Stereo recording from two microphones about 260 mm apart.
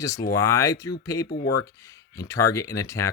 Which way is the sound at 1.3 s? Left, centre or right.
Left.